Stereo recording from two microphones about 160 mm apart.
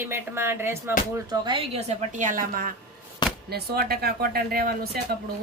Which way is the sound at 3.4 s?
80° right.